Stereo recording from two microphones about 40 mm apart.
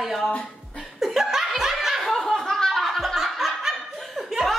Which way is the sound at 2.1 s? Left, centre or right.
Centre.